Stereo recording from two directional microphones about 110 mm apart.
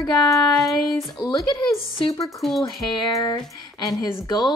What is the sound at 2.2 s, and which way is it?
Speech, centre (ahead or behind).